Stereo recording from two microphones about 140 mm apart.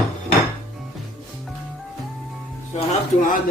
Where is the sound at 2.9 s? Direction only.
70° left (ahead or behind).